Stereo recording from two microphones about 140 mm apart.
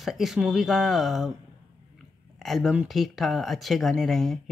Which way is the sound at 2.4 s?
Centre (ahead or behind).